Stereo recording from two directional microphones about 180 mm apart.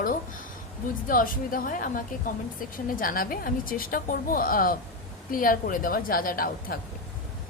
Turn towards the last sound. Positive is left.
turn(degrees=55)  # may be behind; listen again after turning